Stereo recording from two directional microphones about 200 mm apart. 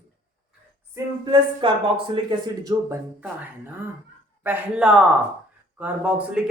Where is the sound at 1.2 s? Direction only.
25° right (ahead or behind).